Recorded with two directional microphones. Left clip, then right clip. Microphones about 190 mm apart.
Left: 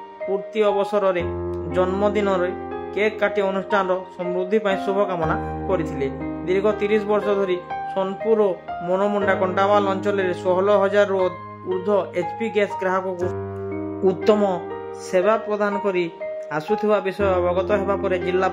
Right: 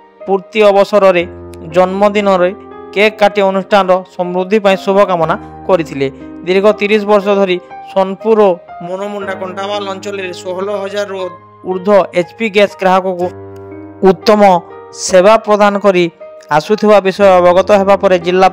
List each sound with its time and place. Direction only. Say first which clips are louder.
0.3 s speech: right 12 dB; 45° right (ahead or behind)
9.2 s a man's voice: even; 5° right (ahead or behind)
9.7 s speech: even; 40° right (ahead or behind)
10.7 s a man's voice: left 2 dB; centre (ahead or behind)
11.8 s speech: right 13 dB; 40° right (ahead or behind)
15.0 s speech: right 13 dB; 45° right (ahead or behind)